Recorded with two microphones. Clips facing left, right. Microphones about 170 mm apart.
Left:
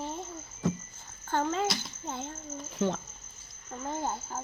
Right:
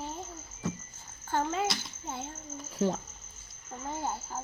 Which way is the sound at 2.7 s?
35° right (ahead or behind).